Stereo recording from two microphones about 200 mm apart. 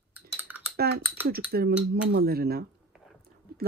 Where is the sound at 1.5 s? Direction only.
50° right (ahead or behind).